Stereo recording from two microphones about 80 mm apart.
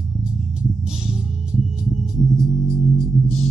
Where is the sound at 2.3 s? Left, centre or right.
Centre.